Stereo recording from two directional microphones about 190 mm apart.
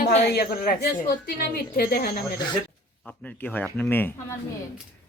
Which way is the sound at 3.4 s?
10° left (ahead or behind).